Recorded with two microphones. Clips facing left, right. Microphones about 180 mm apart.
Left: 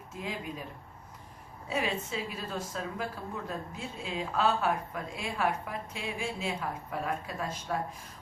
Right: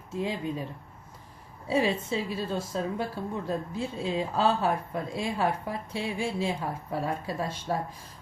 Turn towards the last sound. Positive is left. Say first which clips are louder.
# right 4 dB
turn(degrees=-30)  # may be behind; listen again after turning